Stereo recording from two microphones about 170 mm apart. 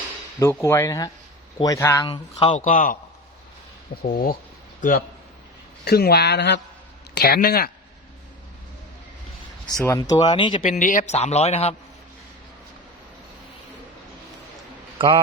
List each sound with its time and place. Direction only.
0.3 s speech: 15° left (ahead or behind)
2.0 s speech: 30° left (ahead or behind)
2.6 s a man's voice: 50° left (ahead or behind)
4.0 s a man's voice: 55° left (ahead or behind)
5.8 s speech: 70° left (ahead or behind); by 6.6 s 85° left
7.2 s speech: 65° left (ahead or behind)
9.8 s speech: 20° left (ahead or behind)
10.6 s a man's voice: 50° left (ahead or behind)
14.9 s speech: 30° right (ahead or behind)